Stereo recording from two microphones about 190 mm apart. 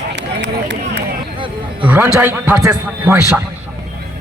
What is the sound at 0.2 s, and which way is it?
Run, 65° right (ahead or behind).